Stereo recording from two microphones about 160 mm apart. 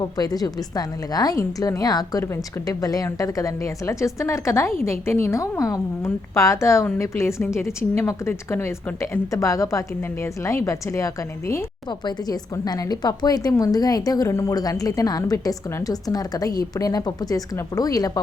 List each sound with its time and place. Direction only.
0.0 s a woman's voice: 25° left (ahead or behind)